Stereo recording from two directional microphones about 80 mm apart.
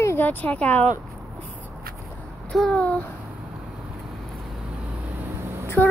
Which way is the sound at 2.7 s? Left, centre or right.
Centre.